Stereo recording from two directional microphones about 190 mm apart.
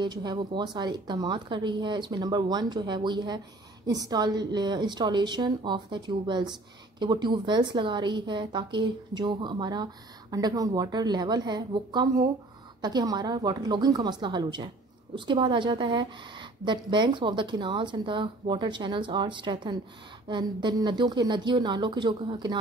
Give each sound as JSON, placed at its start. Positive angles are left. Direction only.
{"t": 0.0, "sound": "speech", "side_deg": -20}